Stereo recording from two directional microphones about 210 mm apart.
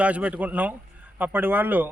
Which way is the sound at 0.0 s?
5° right (ahead or behind).